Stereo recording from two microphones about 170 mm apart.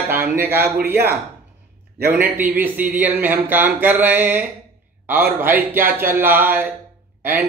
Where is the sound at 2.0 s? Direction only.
10° right (ahead or behind).